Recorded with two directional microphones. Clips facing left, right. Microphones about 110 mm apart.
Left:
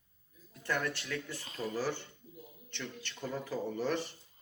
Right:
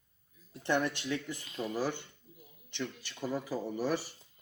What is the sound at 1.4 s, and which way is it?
Speech, 35° left (ahead or behind).